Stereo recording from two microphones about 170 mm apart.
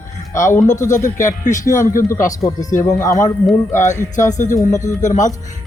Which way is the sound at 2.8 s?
20° left (ahead or behind).